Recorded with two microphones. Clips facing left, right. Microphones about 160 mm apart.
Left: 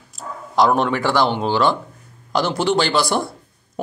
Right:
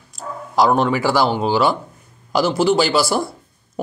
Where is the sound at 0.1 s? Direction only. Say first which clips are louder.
Right 1 dB; centre (ahead or behind).